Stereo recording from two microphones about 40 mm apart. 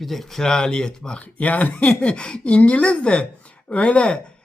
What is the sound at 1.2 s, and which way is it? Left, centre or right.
Speech, left.